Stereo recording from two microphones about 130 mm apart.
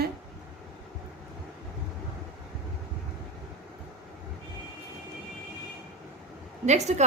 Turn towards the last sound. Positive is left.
turn(degrees=-60)  # may be behind; listen again after turning